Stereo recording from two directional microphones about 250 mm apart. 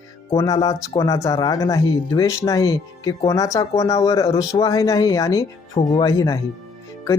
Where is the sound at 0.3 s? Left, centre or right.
Centre.